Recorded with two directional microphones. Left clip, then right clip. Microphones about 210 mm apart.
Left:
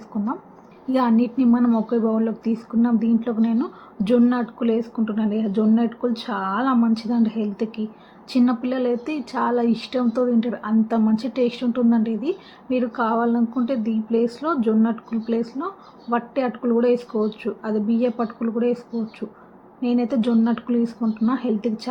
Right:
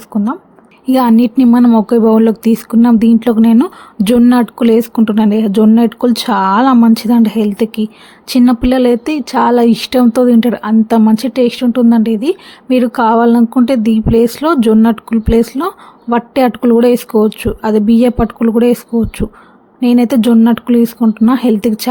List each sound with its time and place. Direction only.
0.1 s a woman's voice: 40° right (ahead or behind)
0.9 s speech: 55° right (ahead or behind)